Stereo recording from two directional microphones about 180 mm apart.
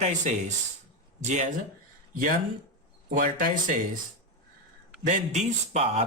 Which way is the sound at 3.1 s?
45° right (ahead or behind).